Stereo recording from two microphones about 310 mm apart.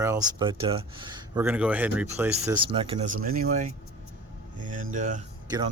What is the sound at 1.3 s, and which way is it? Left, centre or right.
Speech, centre.